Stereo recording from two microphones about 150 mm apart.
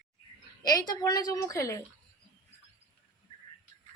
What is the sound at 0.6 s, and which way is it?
Speech, 25° left (ahead or behind).